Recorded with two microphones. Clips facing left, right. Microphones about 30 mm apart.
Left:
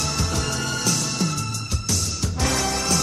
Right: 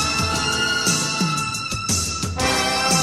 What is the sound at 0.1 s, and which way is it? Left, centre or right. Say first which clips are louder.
Music: right 4 dB; right.